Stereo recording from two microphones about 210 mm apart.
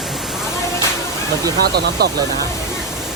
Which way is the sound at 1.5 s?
50° right (ahead or behind).